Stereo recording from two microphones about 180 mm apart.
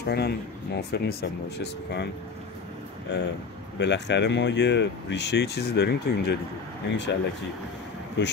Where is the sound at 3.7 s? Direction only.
70° left (ahead or behind).